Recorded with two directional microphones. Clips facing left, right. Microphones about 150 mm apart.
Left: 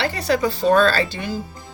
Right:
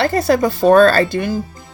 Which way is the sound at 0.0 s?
45° right (ahead or behind).